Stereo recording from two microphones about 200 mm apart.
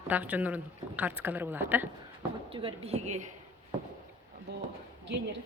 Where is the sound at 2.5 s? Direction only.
30° right (ahead or behind).